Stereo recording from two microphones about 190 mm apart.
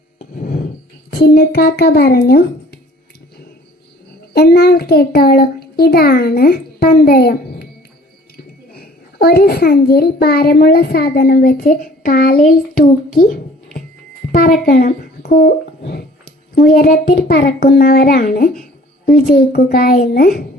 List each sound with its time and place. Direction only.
0.2 s a sound: 45° left (ahead or behind)
1.1 s a child's voice: 60° left (ahead or behind)
4.4 s a child's voice: 55° left (ahead or behind)
8.7 s a child's voice: 55° left (ahead or behind)
14.6 s a child's voice: 45° left (ahead or behind)